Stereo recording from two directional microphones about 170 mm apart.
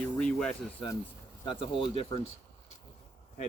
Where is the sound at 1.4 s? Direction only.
30° left (ahead or behind).